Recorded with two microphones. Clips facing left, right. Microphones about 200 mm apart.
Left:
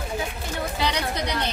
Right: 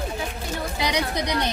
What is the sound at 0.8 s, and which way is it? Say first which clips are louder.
Speech: right 2 dB; 15° right (ahead or behind).